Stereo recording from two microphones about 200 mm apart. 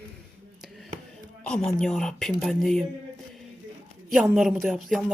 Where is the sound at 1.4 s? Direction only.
5° left (ahead or behind).